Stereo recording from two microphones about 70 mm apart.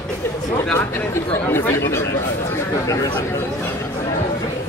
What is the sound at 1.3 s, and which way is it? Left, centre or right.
Speech, left.